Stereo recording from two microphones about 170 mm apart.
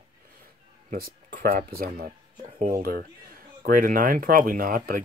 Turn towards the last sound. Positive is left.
turn(degrees=-55)  # may be behind; listen again after turning